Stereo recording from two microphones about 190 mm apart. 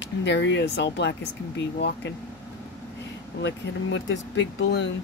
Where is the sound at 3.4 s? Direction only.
70° left (ahead or behind).